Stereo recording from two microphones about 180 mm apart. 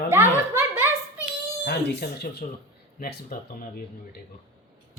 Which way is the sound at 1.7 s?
65° left (ahead or behind).